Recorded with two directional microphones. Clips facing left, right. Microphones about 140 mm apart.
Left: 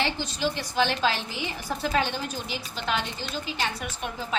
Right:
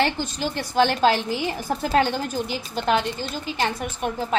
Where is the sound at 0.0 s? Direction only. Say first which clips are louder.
Right 4 dB; 50° right (ahead or behind).